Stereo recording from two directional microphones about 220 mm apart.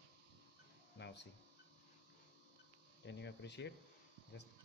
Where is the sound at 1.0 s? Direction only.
50° left (ahead or behind).